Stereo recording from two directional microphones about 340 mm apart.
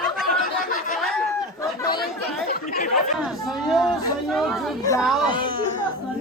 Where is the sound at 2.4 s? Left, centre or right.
Left.